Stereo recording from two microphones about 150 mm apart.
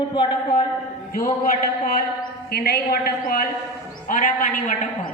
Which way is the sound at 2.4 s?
90° left.